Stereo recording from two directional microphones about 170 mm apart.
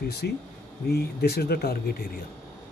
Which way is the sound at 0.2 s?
70° left (ahead or behind).